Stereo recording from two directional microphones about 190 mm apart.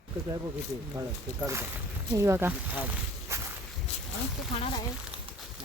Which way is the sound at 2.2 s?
15° right (ahead or behind).